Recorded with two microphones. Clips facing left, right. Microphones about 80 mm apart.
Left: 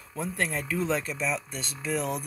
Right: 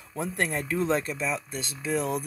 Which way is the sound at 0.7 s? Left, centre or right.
Right.